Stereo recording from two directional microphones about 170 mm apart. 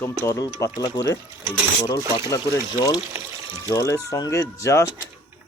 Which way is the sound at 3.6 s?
20° left (ahead or behind).